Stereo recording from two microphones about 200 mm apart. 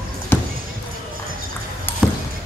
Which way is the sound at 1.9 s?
10° left (ahead or behind).